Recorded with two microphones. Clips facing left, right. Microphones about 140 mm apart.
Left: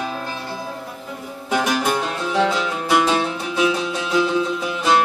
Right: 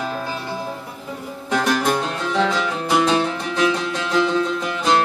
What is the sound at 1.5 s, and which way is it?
Music, 5° left (ahead or behind).